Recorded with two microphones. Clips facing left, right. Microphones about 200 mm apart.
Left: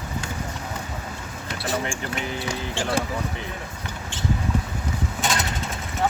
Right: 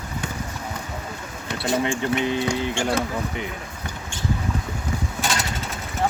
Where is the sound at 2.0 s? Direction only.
20° right (ahead or behind).